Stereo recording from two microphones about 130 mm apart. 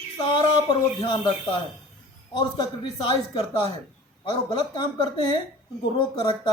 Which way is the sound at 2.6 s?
35° left (ahead or behind).